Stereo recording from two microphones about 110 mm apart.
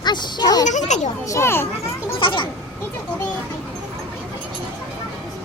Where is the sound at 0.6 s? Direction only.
90° left.